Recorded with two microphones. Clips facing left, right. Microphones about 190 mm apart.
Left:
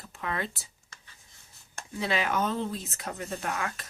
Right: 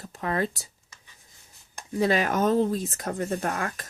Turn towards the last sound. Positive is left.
turn(degrees=-45)  # may be behind; listen again after turning